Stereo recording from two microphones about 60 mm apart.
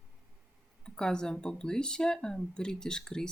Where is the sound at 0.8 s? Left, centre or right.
Centre.